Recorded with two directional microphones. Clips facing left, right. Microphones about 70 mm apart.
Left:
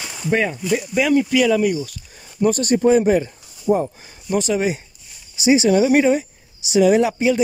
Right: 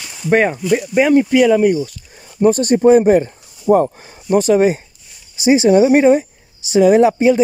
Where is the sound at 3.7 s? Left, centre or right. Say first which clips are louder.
Right 6 dB; right.